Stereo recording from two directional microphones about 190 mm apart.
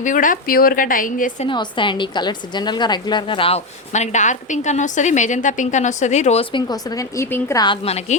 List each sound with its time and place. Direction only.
0.0 s a woman's voice: 45° left (ahead or behind)
1.5 s a woman's voice: 25° left (ahead or behind)